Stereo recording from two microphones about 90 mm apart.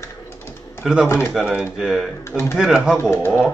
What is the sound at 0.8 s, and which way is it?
A man's voice, 5° right (ahead or behind).